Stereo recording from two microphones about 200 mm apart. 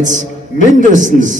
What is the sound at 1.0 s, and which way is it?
Speech, 40° right (ahead or behind).